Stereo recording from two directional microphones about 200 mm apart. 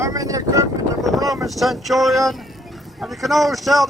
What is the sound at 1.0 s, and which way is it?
Speech, centre (ahead or behind).